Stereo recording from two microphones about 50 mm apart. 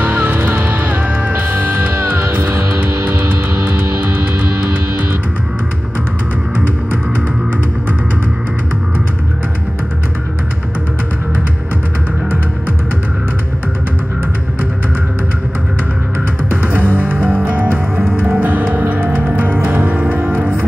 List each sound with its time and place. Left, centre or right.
0.0 s music: right
2.0 s music: right
3.8 s music: right
16.6 s music: right